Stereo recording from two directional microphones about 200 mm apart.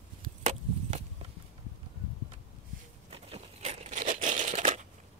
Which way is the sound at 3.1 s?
30° right (ahead or behind).